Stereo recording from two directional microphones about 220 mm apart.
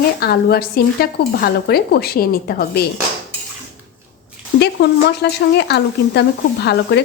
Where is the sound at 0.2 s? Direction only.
45° left (ahead or behind).